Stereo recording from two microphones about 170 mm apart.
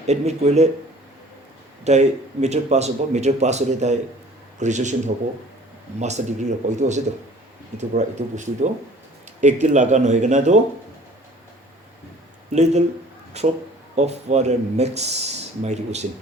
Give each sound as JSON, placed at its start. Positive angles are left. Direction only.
{"t": 0.1, "sound": "speech", "side_deg": -40}
{"t": 1.8, "sound": "speech", "side_deg": -40}
{"t": 12.5, "sound": "speech", "side_deg": -40}